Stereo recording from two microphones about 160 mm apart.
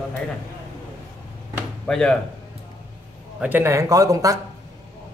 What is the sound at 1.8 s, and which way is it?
Speech, 5° left (ahead or behind).